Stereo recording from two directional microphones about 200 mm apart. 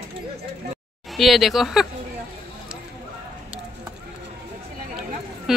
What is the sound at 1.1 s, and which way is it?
Speech, centre (ahead or behind).